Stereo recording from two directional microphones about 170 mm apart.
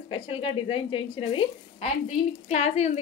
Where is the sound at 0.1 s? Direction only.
30° left (ahead or behind).